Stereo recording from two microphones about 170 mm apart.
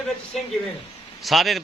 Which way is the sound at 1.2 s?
Centre (ahead or behind).